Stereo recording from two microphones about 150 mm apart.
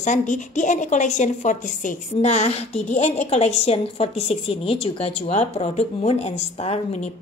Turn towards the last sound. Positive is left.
turn(degrees=45)  # may be behind; listen again after turning